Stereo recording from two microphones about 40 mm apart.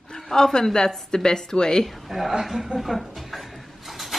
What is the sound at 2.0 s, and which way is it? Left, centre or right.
Speech, centre.